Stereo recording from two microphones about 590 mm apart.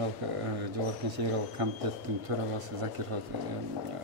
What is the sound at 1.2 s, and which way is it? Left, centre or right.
Speech, right.